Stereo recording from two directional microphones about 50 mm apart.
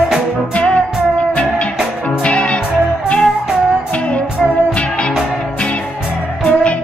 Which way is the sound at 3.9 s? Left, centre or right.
Left.